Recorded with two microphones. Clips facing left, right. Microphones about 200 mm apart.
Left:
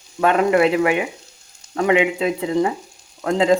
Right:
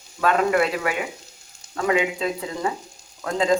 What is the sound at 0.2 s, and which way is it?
Speech, 25° left (ahead or behind).